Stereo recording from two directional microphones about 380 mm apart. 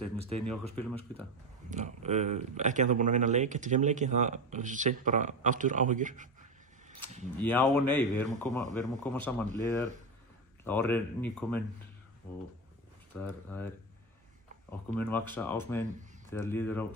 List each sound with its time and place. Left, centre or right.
0.7 s speech: centre
1.7 s speech: centre
7.3 s speech: centre
13.1 s speech: centre
15.0 s speech: centre